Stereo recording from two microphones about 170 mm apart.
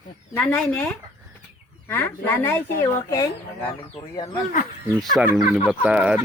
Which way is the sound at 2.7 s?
55° left (ahead or behind).